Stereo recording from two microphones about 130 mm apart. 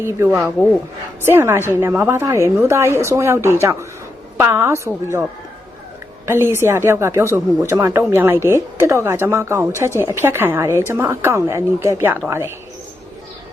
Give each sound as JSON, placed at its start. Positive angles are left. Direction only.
{"t": 0.0, "sound": "a woman's voice", "side_deg": -20}
{"t": 6.2, "sound": "a woman's voice", "side_deg": -20}